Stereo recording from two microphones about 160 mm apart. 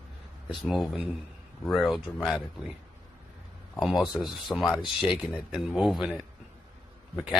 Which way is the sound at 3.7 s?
Centre (ahead or behind).